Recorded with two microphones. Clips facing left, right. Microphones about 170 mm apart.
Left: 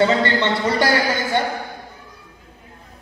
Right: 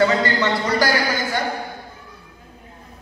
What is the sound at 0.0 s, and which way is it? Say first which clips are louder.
Speech: left 1 dB; 30° left (ahead or behind).